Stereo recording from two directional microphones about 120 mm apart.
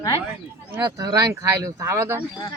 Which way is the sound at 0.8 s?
30° right (ahead or behind).